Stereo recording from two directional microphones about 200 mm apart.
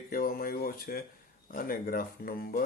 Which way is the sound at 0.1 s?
45° left (ahead or behind).